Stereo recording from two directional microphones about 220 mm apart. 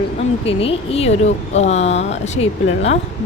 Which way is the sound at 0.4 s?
25° left (ahead or behind).